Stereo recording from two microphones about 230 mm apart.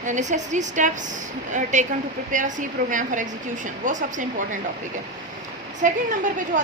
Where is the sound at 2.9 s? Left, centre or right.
Right.